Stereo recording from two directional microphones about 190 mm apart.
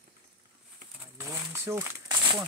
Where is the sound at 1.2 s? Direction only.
15° right (ahead or behind).